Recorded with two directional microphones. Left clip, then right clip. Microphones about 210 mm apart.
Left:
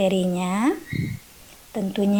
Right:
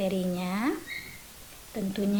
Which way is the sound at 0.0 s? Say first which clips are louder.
Left 8 dB; 30° left (ahead or behind).